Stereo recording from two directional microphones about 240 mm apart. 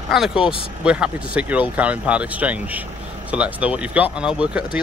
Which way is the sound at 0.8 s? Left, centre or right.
Centre.